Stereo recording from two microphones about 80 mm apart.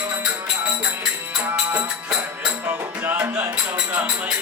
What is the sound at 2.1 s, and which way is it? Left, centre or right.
Music, centre.